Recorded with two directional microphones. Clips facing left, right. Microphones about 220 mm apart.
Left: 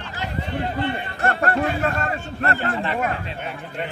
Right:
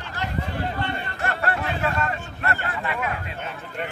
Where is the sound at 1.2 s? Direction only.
45° left (ahead or behind).